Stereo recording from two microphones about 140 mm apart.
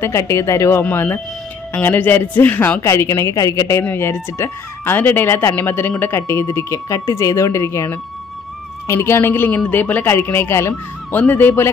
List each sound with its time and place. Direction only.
0.0 s speech: 20° left (ahead or behind)